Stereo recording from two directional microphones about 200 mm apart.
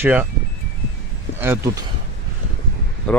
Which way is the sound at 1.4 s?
10° right (ahead or behind).